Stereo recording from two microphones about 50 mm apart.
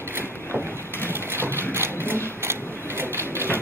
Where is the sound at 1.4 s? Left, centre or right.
Right.